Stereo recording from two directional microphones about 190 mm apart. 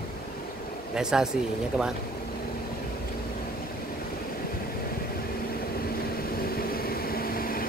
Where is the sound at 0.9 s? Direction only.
5° right (ahead or behind).